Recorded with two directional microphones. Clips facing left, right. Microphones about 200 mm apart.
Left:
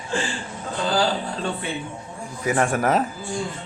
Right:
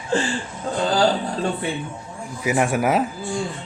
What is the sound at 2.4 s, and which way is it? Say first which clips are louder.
Speech: right 1 dB; 10° right (ahead or behind).